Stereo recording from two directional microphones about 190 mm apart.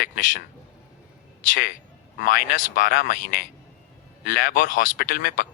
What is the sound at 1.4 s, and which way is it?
Speech, 45° left (ahead or behind).